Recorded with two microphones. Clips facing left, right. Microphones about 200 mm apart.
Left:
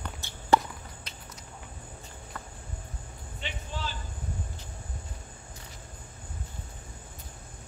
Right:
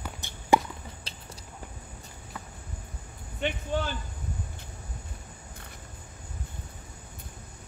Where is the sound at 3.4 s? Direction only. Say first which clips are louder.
Right 9 dB; 55° right (ahead or behind).